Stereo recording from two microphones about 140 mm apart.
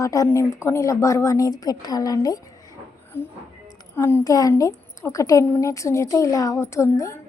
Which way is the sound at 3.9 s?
20° left (ahead or behind).